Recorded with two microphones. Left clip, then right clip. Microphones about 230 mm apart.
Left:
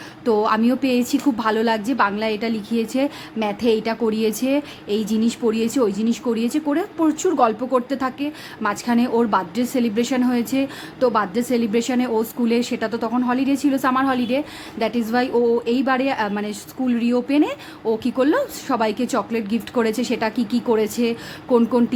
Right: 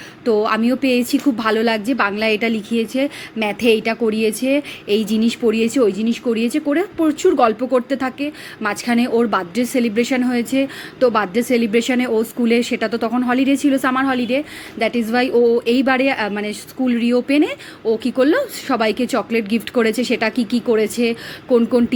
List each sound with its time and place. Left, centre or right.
0.3 s a woman's voice: centre